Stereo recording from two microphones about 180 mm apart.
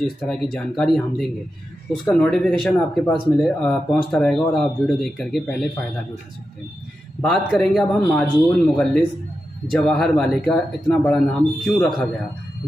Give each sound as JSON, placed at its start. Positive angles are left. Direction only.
{"t": 0.2, "sound": "speech", "side_deg": 0}
{"t": 7.2, "sound": "speech", "side_deg": 5}